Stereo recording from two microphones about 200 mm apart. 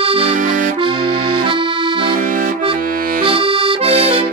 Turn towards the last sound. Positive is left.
turn(degrees=-30)  # may be behind; listen again after turning